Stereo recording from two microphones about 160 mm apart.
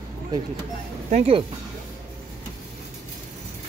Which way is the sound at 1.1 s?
40° right (ahead or behind).